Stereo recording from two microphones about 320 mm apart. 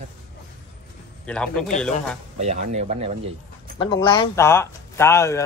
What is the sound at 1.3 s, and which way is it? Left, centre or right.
Speech, centre.